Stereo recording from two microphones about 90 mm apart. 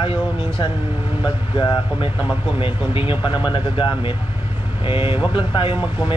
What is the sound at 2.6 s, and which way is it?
Speech, 75° left (ahead or behind).